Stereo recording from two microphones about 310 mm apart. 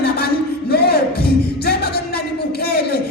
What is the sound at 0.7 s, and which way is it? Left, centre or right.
Music, left.